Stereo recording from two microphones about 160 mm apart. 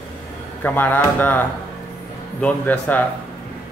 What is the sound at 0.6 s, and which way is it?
Speech, 10° left (ahead or behind).